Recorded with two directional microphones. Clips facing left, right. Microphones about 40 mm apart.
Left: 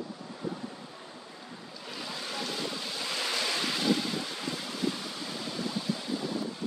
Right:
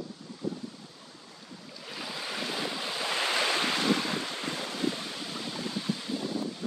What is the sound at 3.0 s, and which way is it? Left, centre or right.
Waves, right.